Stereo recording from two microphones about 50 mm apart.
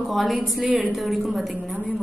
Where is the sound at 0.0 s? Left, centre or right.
Centre.